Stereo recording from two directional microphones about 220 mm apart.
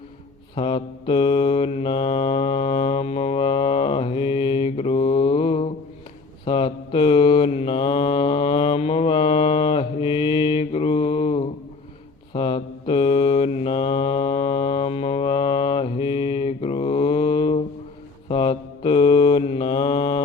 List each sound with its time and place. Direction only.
0.5 s mantra: 20° left (ahead or behind)